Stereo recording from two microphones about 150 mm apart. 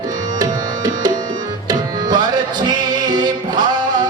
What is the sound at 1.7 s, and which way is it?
Music, 30° right (ahead or behind).